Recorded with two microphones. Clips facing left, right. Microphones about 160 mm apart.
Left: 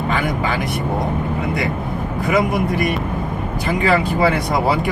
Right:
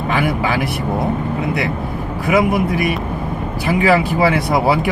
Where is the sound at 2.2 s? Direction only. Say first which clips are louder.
Right 3 dB; 5° right (ahead or behind).